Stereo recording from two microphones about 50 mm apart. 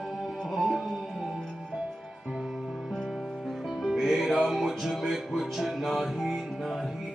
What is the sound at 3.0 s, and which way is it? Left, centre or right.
Music, centre.